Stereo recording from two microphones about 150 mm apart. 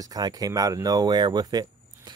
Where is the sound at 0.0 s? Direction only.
25° right (ahead or behind).